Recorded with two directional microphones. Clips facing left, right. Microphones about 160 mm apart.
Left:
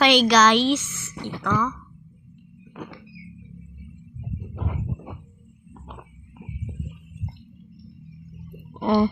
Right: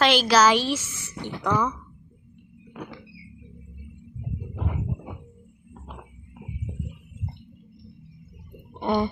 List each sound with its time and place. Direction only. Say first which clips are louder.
0.0 s a woman's voice: left 2 dB; centre (ahead or behind)
8.8 s speech: left 4 dB; centre (ahead or behind)